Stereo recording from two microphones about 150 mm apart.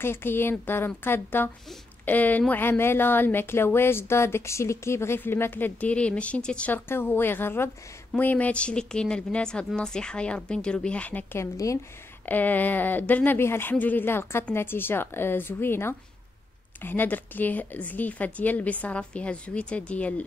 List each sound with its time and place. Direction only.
0.0 s speech: 15° left (ahead or behind)
11.5 s speech: 20° left (ahead or behind)
12.3 s speech: 10° left (ahead or behind)